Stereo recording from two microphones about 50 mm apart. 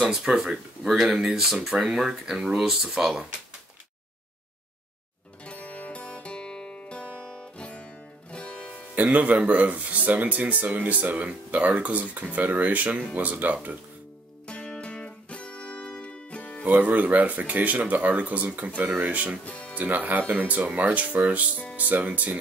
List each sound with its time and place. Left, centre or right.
0.1 s speech: centre
5.4 s music: left
8.9 s speech: right
14.5 s music: centre
16.6 s speech: right
19.4 s speech: left
19.7 s speech: right